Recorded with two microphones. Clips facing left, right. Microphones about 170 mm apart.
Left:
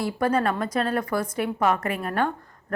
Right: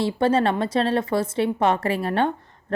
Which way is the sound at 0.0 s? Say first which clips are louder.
Right 3 dB; 25° right (ahead or behind).